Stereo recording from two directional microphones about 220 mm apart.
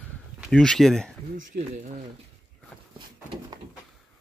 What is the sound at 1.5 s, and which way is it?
Speech, 50° right (ahead or behind).